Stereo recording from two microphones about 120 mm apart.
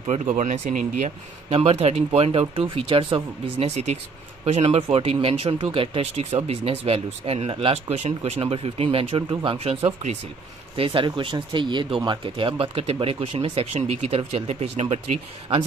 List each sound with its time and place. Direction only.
0.1 s speech: 85° right
1.5 s speech: 55° right (ahead or behind)
3.5 s speech: 65° right (ahead or behind)
7.9 s speech: 65° right (ahead or behind)
10.9 s speech: 40° right (ahead or behind); by 15.0 s 60° right (ahead or behind)